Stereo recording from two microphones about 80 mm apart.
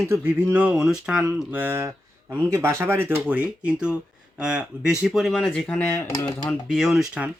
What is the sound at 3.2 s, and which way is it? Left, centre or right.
Speech, centre.